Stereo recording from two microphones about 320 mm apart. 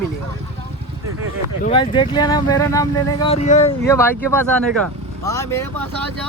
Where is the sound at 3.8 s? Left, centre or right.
Centre.